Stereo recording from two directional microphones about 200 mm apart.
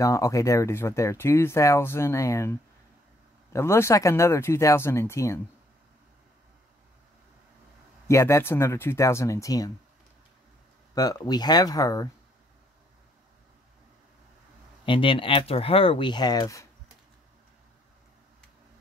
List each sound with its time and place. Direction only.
0.0 s speech: 15° left (ahead or behind)
3.5 s speech: 15° left (ahead or behind)
8.1 s speech: 15° left (ahead or behind)
11.0 s speech: 20° left (ahead or behind)
14.9 s speech: 25° left (ahead or behind)